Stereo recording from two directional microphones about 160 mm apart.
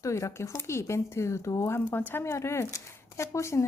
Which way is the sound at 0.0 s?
20° left (ahead or behind).